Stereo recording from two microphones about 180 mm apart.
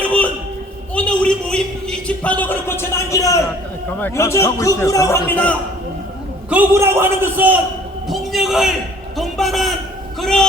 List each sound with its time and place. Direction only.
0.0 s a sound: 5° left (ahead or behind)
4.0 s a man's voice: 15° left (ahead or behind)
6.5 s a man's voice: 10° right (ahead or behind); by 10.4 s 5° left (ahead or behind)